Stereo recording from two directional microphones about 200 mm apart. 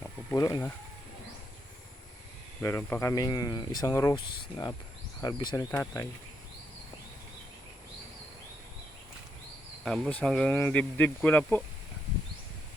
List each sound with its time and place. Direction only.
0.3 s speech: 20° left (ahead or behind)
2.6 s speech: 10° left (ahead or behind)
9.8 s speech: 5° left (ahead or behind)